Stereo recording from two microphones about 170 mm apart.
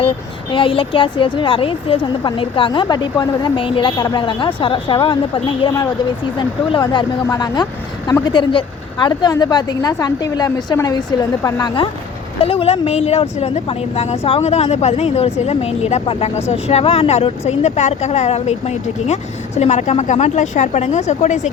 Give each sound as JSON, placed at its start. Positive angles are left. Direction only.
{"t": 0.5, "sound": "a woman's voice", "side_deg": 30}
{"t": 12.4, "sound": "speech", "side_deg": 35}